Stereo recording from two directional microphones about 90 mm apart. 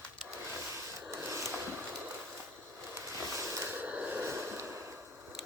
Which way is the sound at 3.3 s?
35° right (ahead or behind).